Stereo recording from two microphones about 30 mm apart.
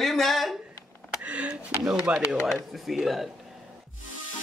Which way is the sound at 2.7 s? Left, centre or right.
Centre.